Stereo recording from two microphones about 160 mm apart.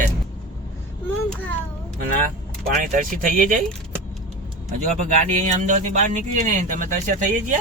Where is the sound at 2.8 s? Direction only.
55° right (ahead or behind).